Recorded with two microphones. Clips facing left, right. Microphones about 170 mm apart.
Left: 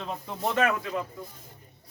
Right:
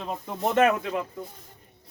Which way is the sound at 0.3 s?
20° right (ahead or behind).